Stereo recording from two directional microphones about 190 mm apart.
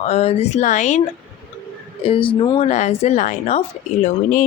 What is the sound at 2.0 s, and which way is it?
Speech, 25° left (ahead or behind).